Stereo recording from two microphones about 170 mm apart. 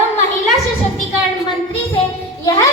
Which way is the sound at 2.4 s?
25° left (ahead or behind).